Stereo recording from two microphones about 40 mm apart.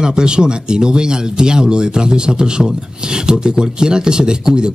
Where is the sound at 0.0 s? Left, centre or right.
Right.